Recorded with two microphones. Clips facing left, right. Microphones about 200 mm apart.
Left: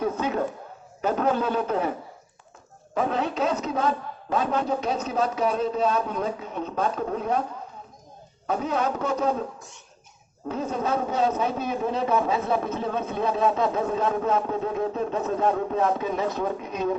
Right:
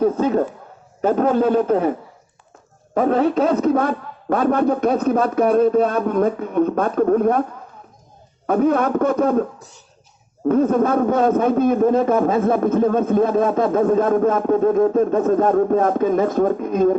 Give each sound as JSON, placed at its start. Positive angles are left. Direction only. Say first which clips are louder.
{"t": 0.0, "sound": "a man's voice", "louder": "right 8 dB", "side_deg": -45}
{"t": 8.4, "sound": "a man's voice", "louder": "right 9 dB", "side_deg": -55}
{"t": 9.6, "sound": "speech", "louder": "right 2 dB", "side_deg": -35}
{"t": 10.5, "sound": "a man's voice", "louder": "right 10 dB", "side_deg": -55}